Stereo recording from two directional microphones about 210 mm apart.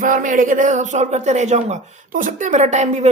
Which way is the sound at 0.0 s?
40° right (ahead or behind).